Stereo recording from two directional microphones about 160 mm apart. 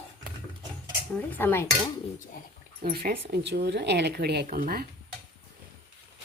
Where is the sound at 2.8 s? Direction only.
65° right (ahead or behind); by 4.4 s 90° right.